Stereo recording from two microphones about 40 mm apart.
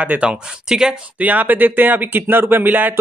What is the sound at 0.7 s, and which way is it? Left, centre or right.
Speech, centre.